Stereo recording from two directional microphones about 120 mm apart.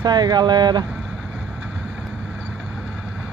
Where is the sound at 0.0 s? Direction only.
35° right (ahead or behind).